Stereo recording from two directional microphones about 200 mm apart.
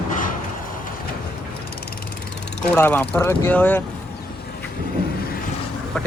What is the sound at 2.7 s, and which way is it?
Speech, 10° left (ahead or behind).